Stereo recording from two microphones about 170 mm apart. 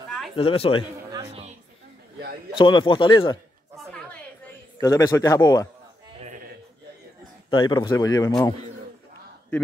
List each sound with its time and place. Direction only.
0.4 s speech: 35° left (ahead or behind)
1.1 s music: 35° right (ahead or behind)
2.5 s speech: 30° left (ahead or behind)
4.7 s speech: 20° left (ahead or behind)
6.1 s sheep: 40° right (ahead or behind)
7.4 s speech: 30° left (ahead or behind)